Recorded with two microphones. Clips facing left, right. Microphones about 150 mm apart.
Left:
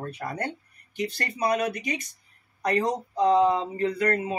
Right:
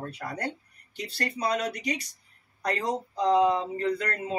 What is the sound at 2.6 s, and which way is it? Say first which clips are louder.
Speech: left 4 dB; 20° left (ahead or behind).